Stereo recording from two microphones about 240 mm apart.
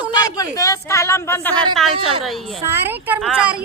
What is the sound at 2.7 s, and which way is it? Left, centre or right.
Speech, centre.